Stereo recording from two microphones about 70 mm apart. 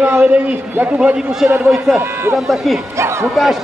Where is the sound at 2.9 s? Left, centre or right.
Right.